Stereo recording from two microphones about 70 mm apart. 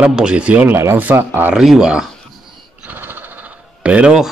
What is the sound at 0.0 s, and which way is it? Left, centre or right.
Speech, centre.